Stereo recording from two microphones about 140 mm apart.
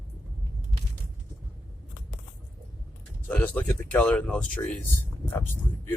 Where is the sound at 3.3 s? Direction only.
10° left (ahead or behind).